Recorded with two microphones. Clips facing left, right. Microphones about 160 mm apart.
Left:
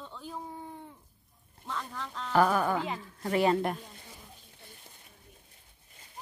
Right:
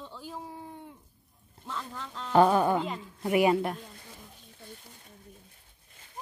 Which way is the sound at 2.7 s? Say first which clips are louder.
Right 2 dB; 5° left (ahead or behind).